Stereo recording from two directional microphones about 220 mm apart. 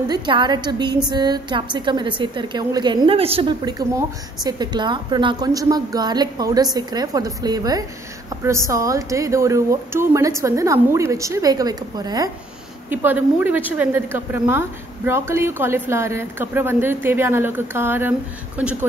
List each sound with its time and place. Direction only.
0.1 s a woman's voice: 20° right (ahead or behind)